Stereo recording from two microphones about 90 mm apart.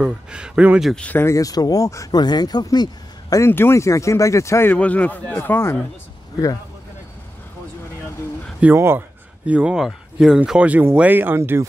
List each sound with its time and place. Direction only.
0.0 s speech: 10° right (ahead or behind)
0.9 s speech: 15° left (ahead or behind)
1.2 s speech: 40° left (ahead or behind)
2.1 s speech: 50° left (ahead or behind)
3.3 s speech: 25° left (ahead or behind)
4.6 s speech: 15° left (ahead or behind)
8.7 s speech: 25° right (ahead or behind)
9.5 s speech: 10° right (ahead or behind)